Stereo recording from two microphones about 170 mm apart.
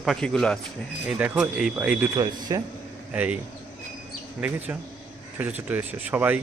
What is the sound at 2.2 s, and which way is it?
Speech, 20° right (ahead or behind).